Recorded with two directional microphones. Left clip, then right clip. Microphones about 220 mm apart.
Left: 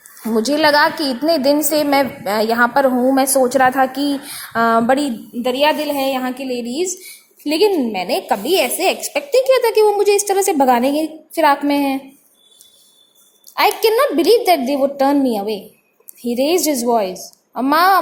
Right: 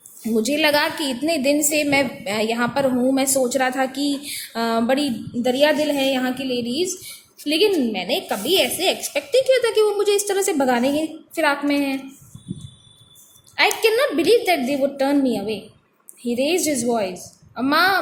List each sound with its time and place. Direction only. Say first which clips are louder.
0.3 s a woman's voice: left 5 dB; 15° left (ahead or behind)
5.4 s a woman's voice: left 2 dB; 10° left (ahead or behind)
13.6 s a woman's voice: left 4 dB; 25° left (ahead or behind)